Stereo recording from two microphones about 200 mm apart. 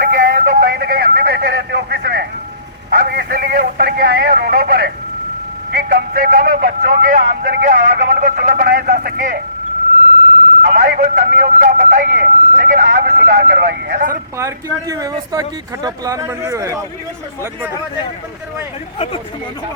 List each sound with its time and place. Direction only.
0.1 s a sound: 45° right (ahead or behind)
5.7 s speech: 50° right (ahead or behind)
10.6 s speech: 45° right (ahead or behind)
14.1 s speech: 15° right (ahead or behind)